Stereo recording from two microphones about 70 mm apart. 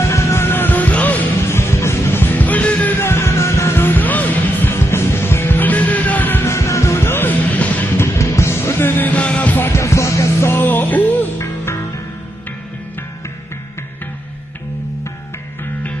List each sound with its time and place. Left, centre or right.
0.0 s music: left
1.5 s music: left
3.0 s music: left
6.5 s music: left
7.9 s music: left
9.7 s music: left
10.5 s music: left
11.3 s music: left